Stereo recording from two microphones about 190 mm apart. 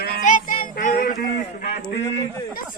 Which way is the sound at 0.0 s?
45° left (ahead or behind).